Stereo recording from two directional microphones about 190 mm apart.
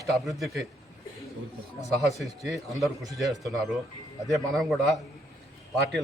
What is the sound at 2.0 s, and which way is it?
A man's voice, centre (ahead or behind).